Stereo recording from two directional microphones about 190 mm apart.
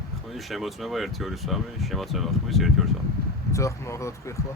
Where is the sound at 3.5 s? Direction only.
15° left (ahead or behind).